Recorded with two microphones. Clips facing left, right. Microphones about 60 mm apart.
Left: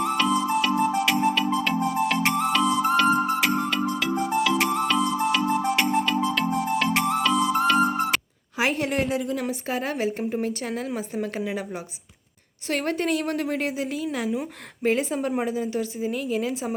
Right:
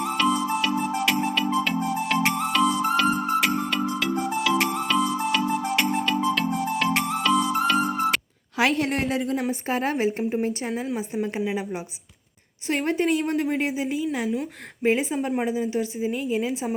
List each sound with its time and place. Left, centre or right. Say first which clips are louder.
0.0 s music: even; centre
8.8 s a woman's voice: even; right
9.5 s a woman's voice: right 3 dB; right; by 11.6 s centre
12.6 s a woman's voice: right 2 dB; centre